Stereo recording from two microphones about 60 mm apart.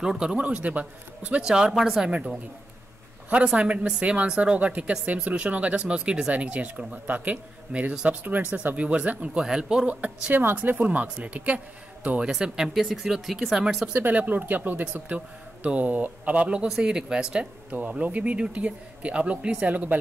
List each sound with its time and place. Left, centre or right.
0.0 s speech: centre
2.0 s speech: centre
3.4 s speech: centre
9.4 s speech: centre
9.8 s speech: right
10.3 s speech: right
12.2 s speech: centre
13.9 s speech: right